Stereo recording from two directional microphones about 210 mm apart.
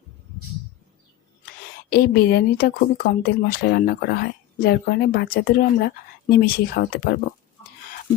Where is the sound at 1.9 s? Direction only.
50° left (ahead or behind).